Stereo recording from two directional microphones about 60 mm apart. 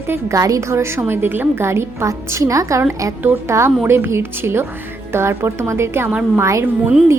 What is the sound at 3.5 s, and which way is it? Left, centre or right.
A woman's voice, right.